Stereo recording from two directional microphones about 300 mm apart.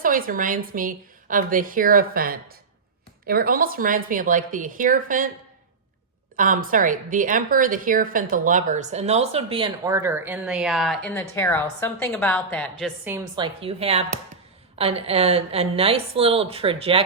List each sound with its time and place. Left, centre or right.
0.0 s a woman's voice: right
6.3 s a woman's voice: right; by 12.9 s centre
13.1 s a woman's voice: centre